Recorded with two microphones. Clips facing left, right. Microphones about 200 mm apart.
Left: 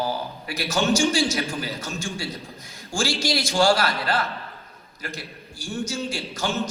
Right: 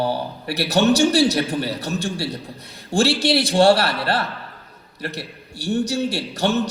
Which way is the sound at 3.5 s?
35° right (ahead or behind).